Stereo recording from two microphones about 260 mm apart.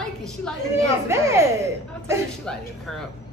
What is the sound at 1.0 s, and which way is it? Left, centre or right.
A woman's voice, centre.